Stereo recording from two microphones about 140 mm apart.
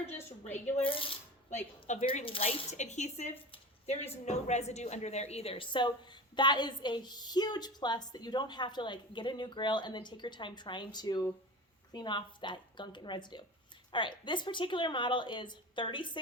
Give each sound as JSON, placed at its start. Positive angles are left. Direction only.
{"t": 0.9, "sound": "speech", "side_deg": 40}
{"t": 2.2, "sound": "a woman's voice", "side_deg": 40}